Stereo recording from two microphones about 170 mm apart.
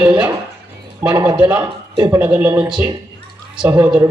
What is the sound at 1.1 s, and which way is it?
A man's voice, 20° right (ahead or behind).